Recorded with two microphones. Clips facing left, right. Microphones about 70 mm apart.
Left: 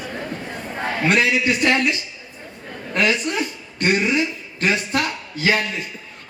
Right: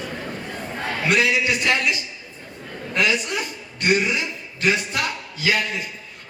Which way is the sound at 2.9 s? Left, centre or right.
Left.